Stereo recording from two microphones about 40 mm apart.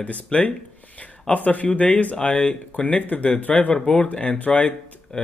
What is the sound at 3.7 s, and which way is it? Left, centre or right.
Speech, centre.